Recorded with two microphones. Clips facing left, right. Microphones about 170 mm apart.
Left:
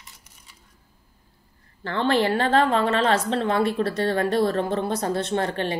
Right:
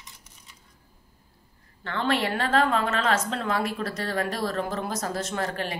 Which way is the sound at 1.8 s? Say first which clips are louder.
Left 5 dB; 30° left (ahead or behind).